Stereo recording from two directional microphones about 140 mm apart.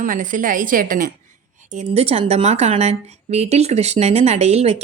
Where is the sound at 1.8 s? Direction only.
50° right (ahead or behind).